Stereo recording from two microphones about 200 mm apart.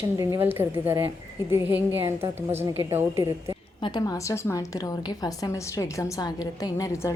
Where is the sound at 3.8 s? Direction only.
20° left (ahead or behind).